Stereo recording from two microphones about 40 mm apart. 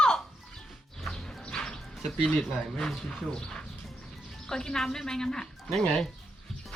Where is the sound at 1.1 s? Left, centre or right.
Centre.